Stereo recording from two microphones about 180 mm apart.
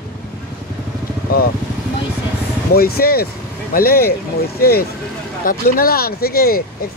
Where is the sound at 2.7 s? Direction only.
60° left (ahead or behind).